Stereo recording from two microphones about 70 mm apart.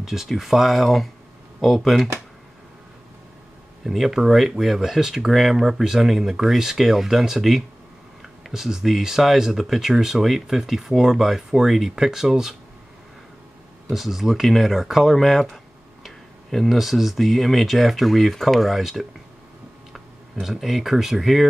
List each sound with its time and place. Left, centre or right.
0.0 s speech: centre
3.8 s speech: centre
13.8 s speech: centre